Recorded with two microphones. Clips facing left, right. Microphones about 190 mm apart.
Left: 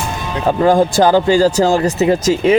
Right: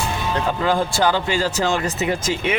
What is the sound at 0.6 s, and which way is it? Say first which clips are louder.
Speech: left 10 dB; 45° left (ahead or behind).